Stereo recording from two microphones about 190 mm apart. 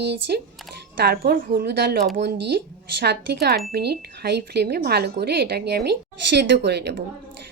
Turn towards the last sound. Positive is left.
turn(degrees=-60)  # may be behind; listen again after turning